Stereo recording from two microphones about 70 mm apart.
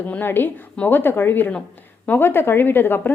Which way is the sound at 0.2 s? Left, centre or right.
Left.